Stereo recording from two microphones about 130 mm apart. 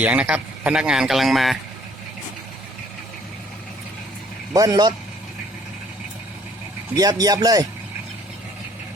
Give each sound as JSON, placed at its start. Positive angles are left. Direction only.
{"t": 0.0, "sound": "a man's voice", "side_deg": -10}
{"t": 4.5, "sound": "speech", "side_deg": -30}
{"t": 6.9, "sound": "speech", "side_deg": -30}